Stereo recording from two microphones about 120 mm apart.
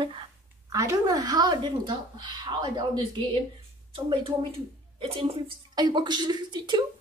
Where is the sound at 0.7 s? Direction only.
25° right (ahead or behind); by 5.4 s 55° right (ahead or behind).